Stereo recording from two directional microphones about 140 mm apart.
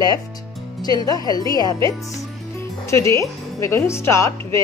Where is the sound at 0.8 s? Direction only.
25° left (ahead or behind).